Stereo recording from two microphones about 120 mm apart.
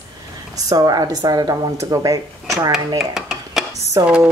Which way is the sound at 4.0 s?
35° right (ahead or behind).